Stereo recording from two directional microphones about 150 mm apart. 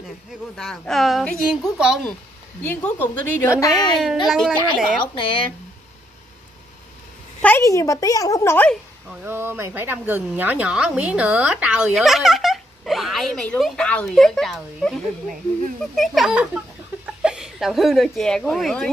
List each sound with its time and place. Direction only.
0.6 s speech: 5° left (ahead or behind)
2.6 s a woman's voice: 10° left (ahead or behind)
3.7 s speech: centre (ahead or behind)
5.0 s speech: 35° left (ahead or behind)
7.4 s a woman's voice: 15° left (ahead or behind)
9.1 s speech: 15° right (ahead or behind); by 15.0 s 5° left (ahead or behind)
16.0 s speech: centre (ahead or behind)